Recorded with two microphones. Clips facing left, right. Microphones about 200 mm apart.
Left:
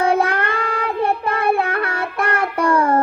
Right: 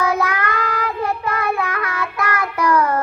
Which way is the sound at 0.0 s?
30° left (ahead or behind).